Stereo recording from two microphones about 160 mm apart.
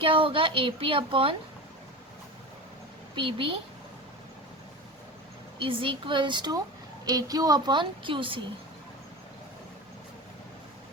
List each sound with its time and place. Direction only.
0.0 s speech: 35° right (ahead or behind)
3.2 s speech: 35° right (ahead or behind)
5.5 s a woman's voice: 35° right (ahead or behind)